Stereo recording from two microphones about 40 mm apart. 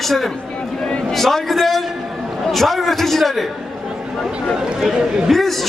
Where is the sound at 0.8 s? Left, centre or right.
Left.